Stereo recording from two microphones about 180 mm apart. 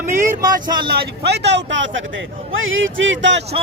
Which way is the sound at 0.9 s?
65° right (ahead or behind).